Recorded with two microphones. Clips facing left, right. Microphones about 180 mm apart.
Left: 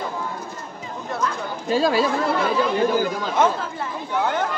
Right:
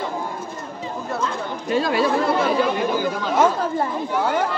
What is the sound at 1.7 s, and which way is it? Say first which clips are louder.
Speech: left 1 dB; 30° left (ahead or behind).